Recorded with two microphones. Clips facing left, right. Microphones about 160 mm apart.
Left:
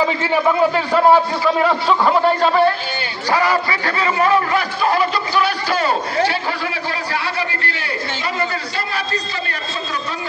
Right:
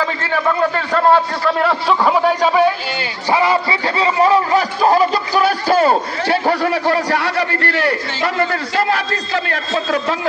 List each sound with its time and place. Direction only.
0.0 s a man's voice: 10° left (ahead or behind); by 2.7 s 10° right (ahead or behind)
3.3 s a man's voice: 20° right (ahead or behind); by 10.1 s 90° right